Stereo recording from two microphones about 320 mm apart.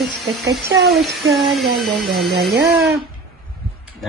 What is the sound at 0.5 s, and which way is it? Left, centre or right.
Speech, centre.